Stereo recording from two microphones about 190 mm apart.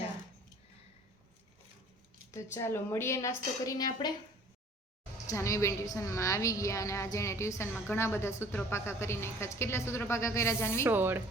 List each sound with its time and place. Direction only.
2.3 s a woman's voice: 15° left (ahead or behind)
5.2 s a woman's voice: 15° left (ahead or behind)
10.8 s speech: 10° right (ahead or behind)